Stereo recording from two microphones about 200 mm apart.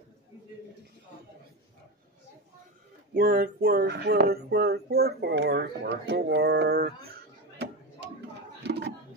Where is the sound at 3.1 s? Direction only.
45° right (ahead or behind).